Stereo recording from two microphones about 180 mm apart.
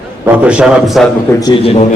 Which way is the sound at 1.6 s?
35° left (ahead or behind).